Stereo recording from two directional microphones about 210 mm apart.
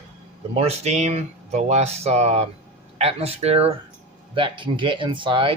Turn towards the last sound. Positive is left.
turn(degrees=-25)  # may be behind; listen again after turning